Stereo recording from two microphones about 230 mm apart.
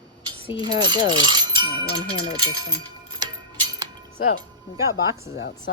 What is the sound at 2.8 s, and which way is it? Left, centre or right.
Tick-tock, centre.